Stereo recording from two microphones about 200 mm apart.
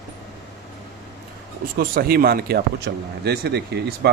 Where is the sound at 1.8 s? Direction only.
50° right (ahead or behind).